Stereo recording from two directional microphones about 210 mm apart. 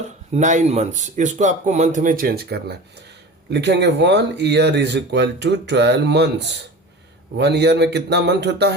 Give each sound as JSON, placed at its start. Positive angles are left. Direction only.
{"t": 0.3, "sound": "speech", "side_deg": -35}